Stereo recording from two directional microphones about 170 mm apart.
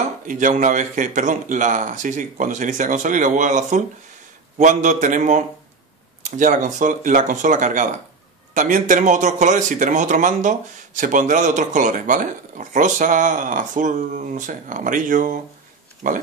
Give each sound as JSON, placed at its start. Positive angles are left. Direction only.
{"t": 0.3, "sound": "speech", "side_deg": -50}